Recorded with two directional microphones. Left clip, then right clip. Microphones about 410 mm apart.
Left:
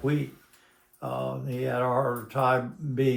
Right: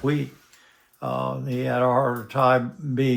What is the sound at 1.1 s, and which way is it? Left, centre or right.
Speech, right.